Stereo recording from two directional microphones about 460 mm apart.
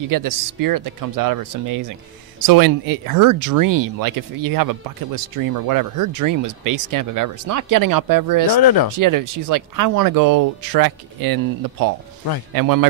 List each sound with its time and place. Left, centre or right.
0.1 s speech: right
8.5 s speech: left
8.9 s speech: right